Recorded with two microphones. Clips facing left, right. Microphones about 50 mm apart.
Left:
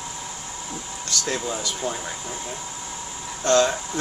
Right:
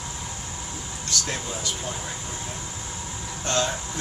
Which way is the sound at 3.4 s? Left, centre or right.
Left.